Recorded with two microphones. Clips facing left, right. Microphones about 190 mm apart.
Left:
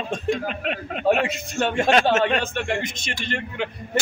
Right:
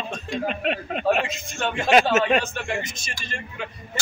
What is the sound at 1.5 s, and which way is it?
Speech, 45° left (ahead or behind).